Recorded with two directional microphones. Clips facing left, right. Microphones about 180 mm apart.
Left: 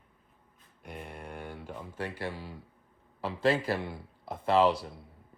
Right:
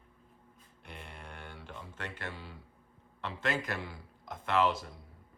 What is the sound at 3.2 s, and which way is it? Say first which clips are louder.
A man's voice: left 7 dB; 30° left (ahead or behind).